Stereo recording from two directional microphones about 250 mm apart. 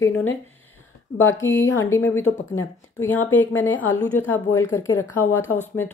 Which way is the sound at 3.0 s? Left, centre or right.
Centre.